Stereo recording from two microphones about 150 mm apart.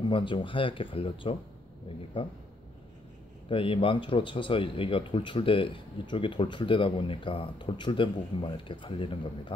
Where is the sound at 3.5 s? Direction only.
35° left (ahead or behind).